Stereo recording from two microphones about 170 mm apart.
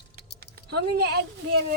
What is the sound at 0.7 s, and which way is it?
Speech, 70° right (ahead or behind).